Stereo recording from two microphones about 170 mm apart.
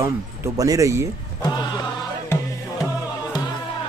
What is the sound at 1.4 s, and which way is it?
Music, 25° left (ahead or behind).